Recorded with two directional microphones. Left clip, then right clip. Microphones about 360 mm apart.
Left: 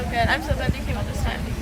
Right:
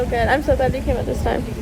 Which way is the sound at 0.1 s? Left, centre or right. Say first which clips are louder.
Right 2 dB; centre.